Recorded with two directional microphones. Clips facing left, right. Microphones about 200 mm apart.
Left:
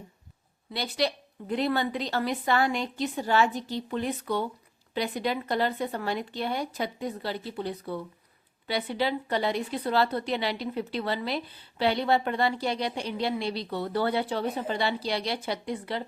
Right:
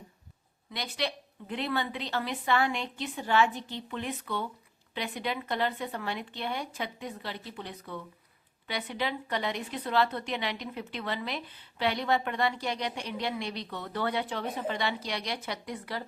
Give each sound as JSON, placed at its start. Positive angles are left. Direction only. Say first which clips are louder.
{"t": 0.7, "sound": "speech", "louder": "left 5 dB", "side_deg": 35}